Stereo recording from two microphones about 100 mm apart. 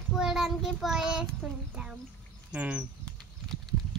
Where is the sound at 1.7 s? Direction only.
10° right (ahead or behind).